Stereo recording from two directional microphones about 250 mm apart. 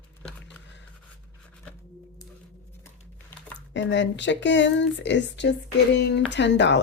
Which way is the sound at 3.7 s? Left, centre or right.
Left.